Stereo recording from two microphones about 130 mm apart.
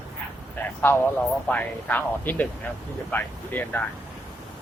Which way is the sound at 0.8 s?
15° left (ahead or behind).